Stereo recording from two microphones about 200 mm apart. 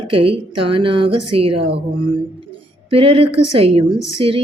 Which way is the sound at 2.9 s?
30° right (ahead or behind).